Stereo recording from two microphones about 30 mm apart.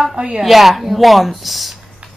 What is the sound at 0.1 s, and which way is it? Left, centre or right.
Speech, right.